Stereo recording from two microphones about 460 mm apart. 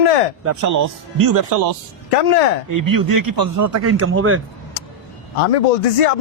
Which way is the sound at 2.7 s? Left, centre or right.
Right.